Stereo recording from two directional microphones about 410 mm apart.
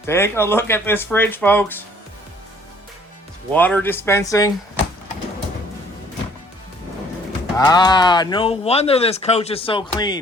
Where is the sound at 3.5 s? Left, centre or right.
Centre.